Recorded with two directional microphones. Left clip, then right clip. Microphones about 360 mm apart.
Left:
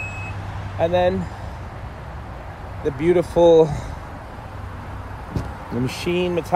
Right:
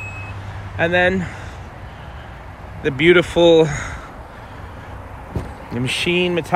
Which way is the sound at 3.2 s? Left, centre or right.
Right.